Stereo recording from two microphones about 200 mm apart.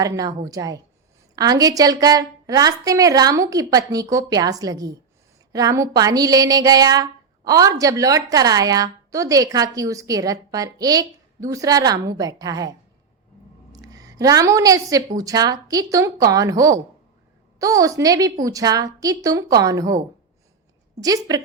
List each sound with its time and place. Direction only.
0.0 s speech: 15° right (ahead or behind)
13.7 s a woman's voice: 15° right (ahead or behind)
21.0 s speech: 20° right (ahead or behind)